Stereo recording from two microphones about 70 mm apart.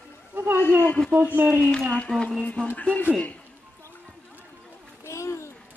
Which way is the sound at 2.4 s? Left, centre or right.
Centre.